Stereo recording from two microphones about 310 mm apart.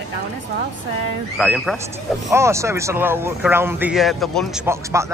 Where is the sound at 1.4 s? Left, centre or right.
Centre.